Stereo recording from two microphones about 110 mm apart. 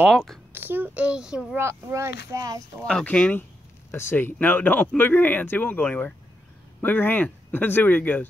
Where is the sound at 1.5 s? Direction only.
25° right (ahead or behind).